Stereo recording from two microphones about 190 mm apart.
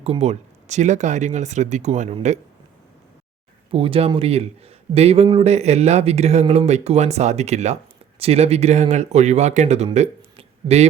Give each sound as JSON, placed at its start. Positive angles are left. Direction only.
{"t": 0.0, "sound": "a man's voice", "side_deg": -35}
{"t": 3.7, "sound": "a man's voice", "side_deg": -30}